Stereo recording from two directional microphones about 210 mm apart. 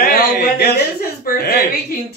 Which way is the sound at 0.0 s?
50° left (ahead or behind).